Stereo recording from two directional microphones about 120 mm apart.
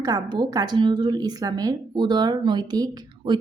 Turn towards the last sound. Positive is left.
turn(degrees=-35)  # may be behind; listen again after turning